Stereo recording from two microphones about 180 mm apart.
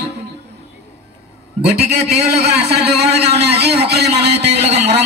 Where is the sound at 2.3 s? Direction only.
65° right (ahead or behind).